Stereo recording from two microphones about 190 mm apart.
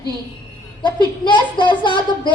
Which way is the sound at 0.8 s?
25° left (ahead or behind).